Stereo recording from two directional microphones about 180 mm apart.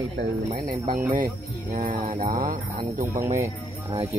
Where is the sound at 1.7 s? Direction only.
50° right (ahead or behind).